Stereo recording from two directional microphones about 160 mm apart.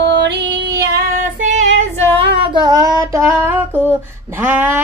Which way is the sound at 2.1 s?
30° right (ahead or behind).